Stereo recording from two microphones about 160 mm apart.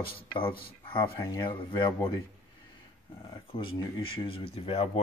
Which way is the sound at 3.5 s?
35° left (ahead or behind).